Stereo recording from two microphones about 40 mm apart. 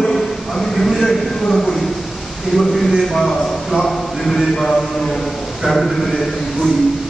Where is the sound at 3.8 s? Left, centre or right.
Centre.